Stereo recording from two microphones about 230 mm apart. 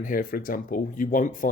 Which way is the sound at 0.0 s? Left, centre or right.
Left.